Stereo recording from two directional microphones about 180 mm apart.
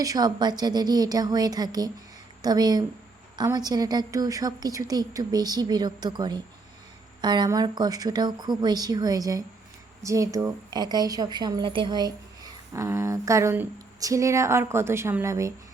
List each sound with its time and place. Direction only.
0.0 s a woman's voice: 20° right (ahead or behind)